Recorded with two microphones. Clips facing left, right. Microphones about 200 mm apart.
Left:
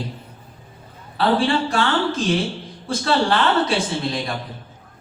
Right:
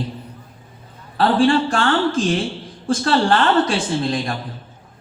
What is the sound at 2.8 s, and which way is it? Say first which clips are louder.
Speech: right 3 dB; 50° right (ahead or behind).